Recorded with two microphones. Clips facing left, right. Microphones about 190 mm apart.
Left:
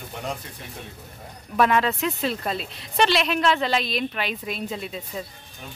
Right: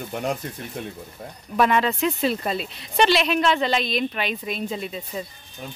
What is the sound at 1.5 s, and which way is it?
Speech, centre (ahead or behind).